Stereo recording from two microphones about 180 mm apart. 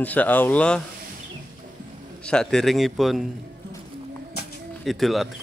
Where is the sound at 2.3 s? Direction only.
5° left (ahead or behind).